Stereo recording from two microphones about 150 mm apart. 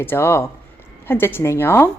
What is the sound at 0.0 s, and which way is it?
Speech, 15° left (ahead or behind).